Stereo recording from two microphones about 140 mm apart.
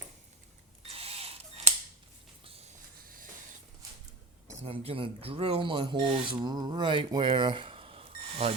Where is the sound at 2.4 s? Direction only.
45° right (ahead or behind).